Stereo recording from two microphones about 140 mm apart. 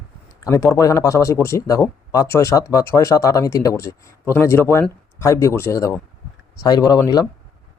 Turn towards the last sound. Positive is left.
turn(degrees=30)  # may be behind; listen again after turning